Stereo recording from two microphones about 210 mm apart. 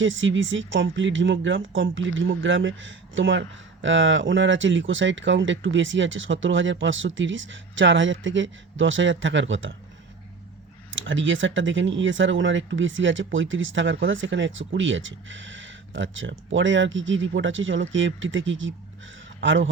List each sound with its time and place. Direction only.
0.0 s speech: 65° right (ahead or behind)
10.9 s a man's voice: 65° right (ahead or behind)